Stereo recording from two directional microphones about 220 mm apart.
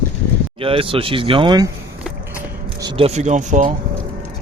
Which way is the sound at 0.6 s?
25° right (ahead or behind).